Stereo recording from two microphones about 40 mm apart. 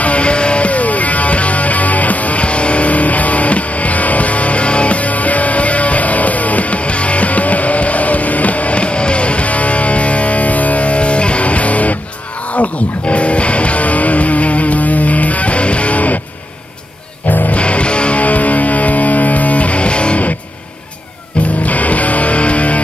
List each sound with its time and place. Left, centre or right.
0.0 s music: left
17.5 s music: left
21.6 s music: left